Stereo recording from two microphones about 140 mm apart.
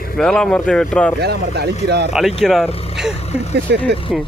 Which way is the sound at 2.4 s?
Centre (ahead or behind).